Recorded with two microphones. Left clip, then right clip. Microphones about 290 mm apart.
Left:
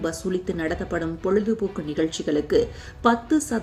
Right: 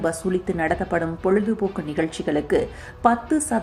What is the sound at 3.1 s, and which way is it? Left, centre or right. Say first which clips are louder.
Speech: right 1 dB; centre.